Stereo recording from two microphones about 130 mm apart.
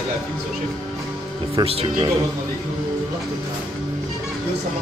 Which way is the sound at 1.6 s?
50° right (ahead or behind).